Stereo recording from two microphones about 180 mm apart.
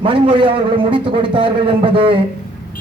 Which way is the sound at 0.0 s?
30° right (ahead or behind).